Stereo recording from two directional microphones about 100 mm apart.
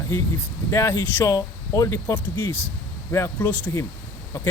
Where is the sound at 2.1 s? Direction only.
20° left (ahead or behind).